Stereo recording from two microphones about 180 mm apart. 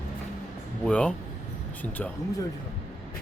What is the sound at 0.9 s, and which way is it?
Speech, 5° left (ahead or behind).